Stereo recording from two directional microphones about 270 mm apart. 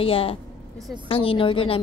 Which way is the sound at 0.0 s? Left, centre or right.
Left.